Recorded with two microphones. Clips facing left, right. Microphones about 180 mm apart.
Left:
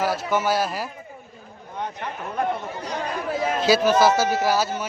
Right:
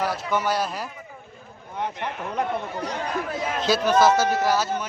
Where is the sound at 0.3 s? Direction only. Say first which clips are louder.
Left 1 dB; 5° left (ahead or behind).